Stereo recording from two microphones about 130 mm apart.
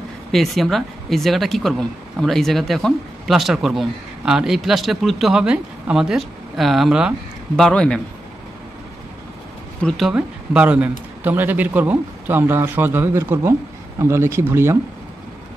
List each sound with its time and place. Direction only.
0.3 s speech: centre (ahead or behind)
7.5 s speech: 5° left (ahead or behind)
9.8 s speech: 5° left (ahead or behind); by 14.8 s 20° right (ahead or behind)